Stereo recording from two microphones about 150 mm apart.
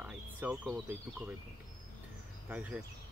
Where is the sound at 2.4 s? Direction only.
10° right (ahead or behind).